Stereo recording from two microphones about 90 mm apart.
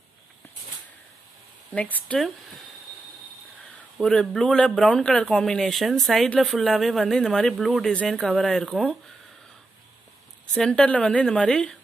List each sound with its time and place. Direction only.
1.7 s a woman's voice: 15° left (ahead or behind)
2.1 s speech: centre (ahead or behind)
4.0 s speech: 5° left (ahead or behind)
10.4 s a woman's voice: 10° left (ahead or behind)